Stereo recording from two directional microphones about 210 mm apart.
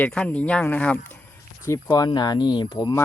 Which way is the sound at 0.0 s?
5° left (ahead or behind).